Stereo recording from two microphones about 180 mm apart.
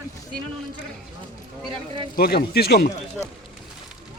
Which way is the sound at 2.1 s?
60° left (ahead or behind).